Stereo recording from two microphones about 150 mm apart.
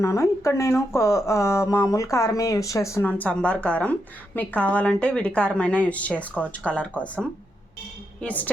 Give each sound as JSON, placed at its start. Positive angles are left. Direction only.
{"t": 0.0, "sound": "a woman's voice", "side_deg": 20}